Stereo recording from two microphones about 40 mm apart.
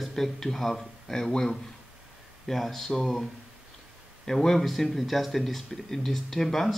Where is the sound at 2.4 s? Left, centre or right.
Centre.